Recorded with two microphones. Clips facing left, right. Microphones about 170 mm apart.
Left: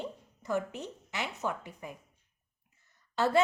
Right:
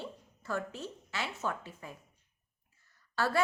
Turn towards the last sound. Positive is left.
turn(degrees=20)  # may be behind; listen again after turning